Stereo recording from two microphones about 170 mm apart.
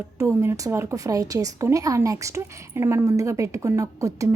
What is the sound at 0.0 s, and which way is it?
A woman's voice, 15° right (ahead or behind).